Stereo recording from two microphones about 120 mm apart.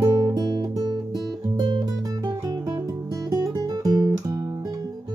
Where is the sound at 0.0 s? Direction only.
35° right (ahead or behind).